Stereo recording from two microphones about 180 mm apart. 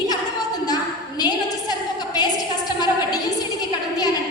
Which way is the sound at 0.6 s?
20° left (ahead or behind).